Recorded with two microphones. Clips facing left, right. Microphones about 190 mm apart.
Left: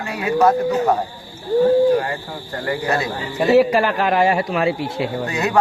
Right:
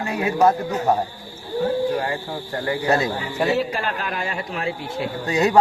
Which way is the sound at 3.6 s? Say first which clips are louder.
Left 9 dB; 85° left.